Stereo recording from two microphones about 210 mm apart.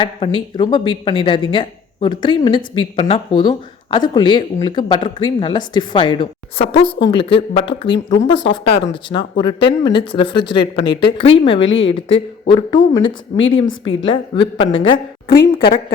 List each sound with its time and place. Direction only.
0.0 s speech: 20° left (ahead or behind)
7.9 s a woman's voice: 60° left (ahead or behind)
8.9 s speech: 25° left (ahead or behind)